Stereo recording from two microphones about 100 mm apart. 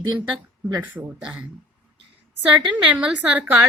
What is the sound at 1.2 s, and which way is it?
Speech, 15° right (ahead or behind).